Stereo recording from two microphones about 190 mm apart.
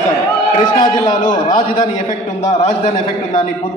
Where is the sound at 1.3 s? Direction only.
20° left (ahead or behind).